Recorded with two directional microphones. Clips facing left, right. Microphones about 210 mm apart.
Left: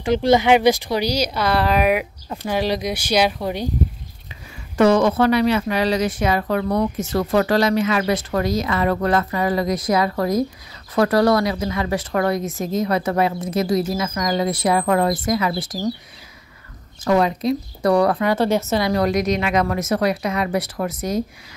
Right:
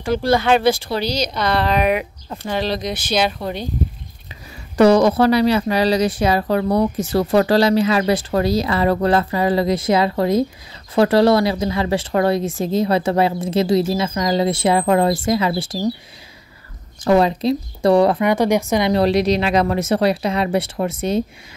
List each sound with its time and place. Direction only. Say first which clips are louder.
0.0 s speech: left 1 dB; 20° left (ahead or behind)
4.7 s speech: right 3 dB; 35° right (ahead or behind)
17.0 s speech: right 3 dB; 30° right (ahead or behind)